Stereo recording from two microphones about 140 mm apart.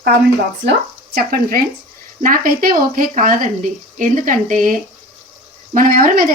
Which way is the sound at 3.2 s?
75° right (ahead or behind).